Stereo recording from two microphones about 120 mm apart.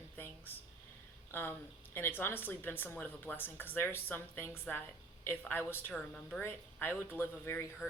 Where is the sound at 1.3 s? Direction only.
20° left (ahead or behind).